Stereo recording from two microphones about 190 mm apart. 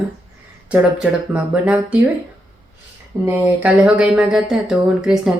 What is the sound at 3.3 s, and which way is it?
Speech, 10° right (ahead or behind).